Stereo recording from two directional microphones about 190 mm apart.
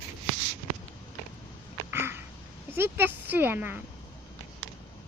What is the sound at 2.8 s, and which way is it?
Speech, 10° right (ahead or behind).